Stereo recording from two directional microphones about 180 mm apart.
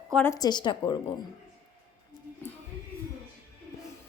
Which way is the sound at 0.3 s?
25° left (ahead or behind).